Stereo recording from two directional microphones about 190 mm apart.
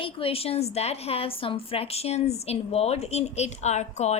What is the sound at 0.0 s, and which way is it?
A woman's voice, 30° left (ahead or behind).